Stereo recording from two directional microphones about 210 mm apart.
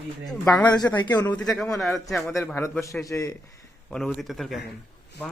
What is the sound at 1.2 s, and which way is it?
A man's voice, 5° left (ahead or behind).